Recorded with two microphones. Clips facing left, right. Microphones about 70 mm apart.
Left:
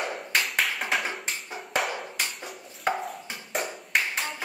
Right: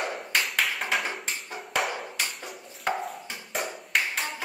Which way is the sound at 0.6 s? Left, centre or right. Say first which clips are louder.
Even; centre.